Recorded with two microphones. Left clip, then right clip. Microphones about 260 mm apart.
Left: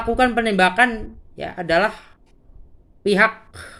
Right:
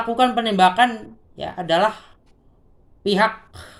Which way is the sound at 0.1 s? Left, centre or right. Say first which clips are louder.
Left 2 dB; right.